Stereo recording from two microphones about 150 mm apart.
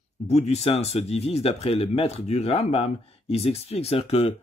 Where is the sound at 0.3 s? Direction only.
45° left (ahead or behind).